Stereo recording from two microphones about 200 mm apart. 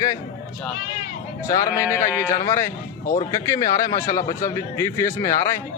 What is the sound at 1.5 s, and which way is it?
Speech, 15° left (ahead or behind).